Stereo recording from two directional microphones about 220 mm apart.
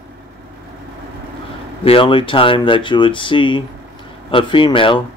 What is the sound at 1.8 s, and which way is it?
Speech, 25° left (ahead or behind).